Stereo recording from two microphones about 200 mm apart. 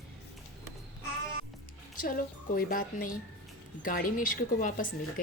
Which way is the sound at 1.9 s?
45° left (ahead or behind).